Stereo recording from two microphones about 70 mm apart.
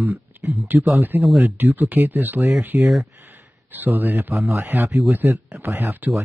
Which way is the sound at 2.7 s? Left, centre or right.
Centre.